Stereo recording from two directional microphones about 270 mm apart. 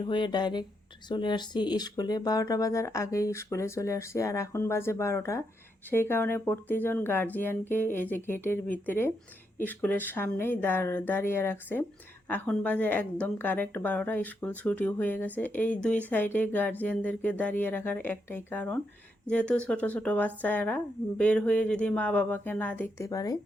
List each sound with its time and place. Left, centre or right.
0.0 s speech: centre